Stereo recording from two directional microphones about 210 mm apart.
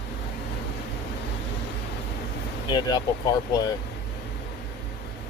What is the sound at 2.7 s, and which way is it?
Speech, 20° left (ahead or behind).